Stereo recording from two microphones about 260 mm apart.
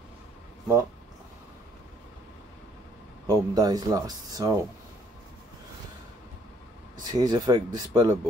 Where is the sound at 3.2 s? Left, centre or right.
Centre.